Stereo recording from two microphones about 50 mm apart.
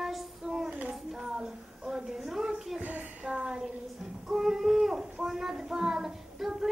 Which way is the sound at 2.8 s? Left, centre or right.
Right.